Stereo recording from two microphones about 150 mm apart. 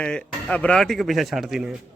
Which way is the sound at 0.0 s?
5° left (ahead or behind).